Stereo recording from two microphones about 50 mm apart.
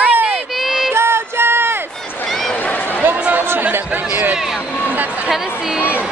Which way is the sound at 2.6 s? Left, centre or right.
Left.